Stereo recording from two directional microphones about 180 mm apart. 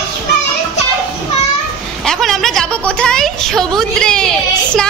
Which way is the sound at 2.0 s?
Centre (ahead or behind).